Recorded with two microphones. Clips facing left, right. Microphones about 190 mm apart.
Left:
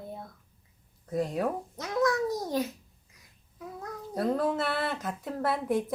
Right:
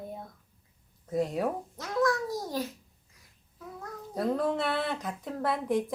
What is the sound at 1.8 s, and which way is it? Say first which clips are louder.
Speech: left 1 dB; 20° left (ahead or behind).